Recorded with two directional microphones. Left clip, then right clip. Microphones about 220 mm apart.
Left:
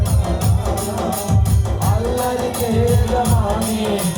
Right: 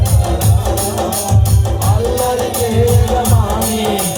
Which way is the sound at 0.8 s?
30° right (ahead or behind).